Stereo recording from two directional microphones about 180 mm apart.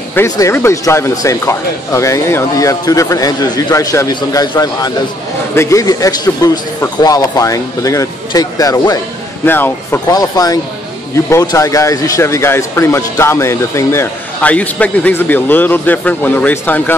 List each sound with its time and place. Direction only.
0.1 s a man's voice: 15° left (ahead or behind)